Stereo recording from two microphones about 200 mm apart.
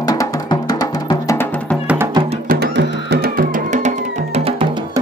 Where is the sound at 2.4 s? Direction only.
50° right (ahead or behind); by 4.6 s 30° right (ahead or behind).